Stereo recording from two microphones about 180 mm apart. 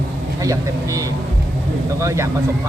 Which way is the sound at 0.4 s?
20° right (ahead or behind).